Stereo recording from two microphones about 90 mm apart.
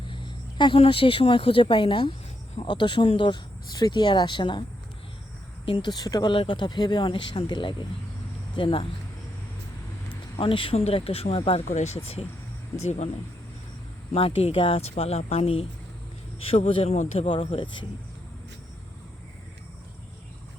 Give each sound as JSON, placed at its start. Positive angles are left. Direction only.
{"t": 0.0, "sound": "speech", "side_deg": 65}
{"t": 5.6, "sound": "speech", "side_deg": 80}
{"t": 5.9, "sound": "speech", "side_deg": 45}
{"t": 6.3, "sound": "speech", "side_deg": 75}
{"t": 8.5, "sound": "speech", "side_deg": 80}
{"t": 10.3, "sound": "speech", "side_deg": 70}
{"t": 14.2, "sound": "speech", "side_deg": 90}
{"t": 17.2, "sound": "speech", "side_deg": 75}